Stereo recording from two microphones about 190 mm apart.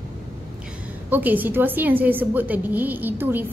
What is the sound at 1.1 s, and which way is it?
A woman's voice, 10° right (ahead or behind).